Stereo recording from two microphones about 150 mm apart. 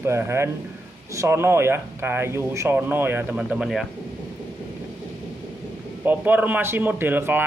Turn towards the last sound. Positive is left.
turn(degrees=-15)  # may be behind; listen again after turning